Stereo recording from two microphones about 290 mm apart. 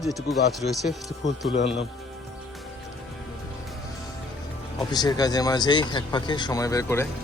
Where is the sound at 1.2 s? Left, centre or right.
Left.